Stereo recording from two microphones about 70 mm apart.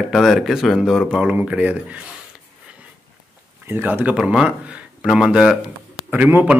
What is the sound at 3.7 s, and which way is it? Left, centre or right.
Speech, right.